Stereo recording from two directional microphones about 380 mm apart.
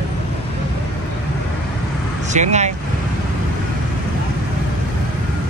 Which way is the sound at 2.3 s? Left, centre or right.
Centre.